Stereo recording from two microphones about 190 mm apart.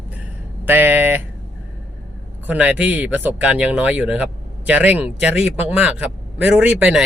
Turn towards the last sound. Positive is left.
turn(degrees=-5)  # may be behind; listen again after turning